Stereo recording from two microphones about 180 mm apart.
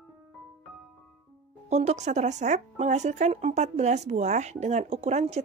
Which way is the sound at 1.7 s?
40° right (ahead or behind).